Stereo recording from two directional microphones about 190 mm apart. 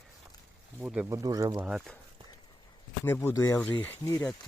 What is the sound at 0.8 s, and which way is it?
Speech, 10° right (ahead or behind).